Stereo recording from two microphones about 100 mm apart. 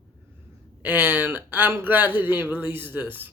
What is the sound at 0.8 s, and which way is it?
A woman's voice, 20° right (ahead or behind).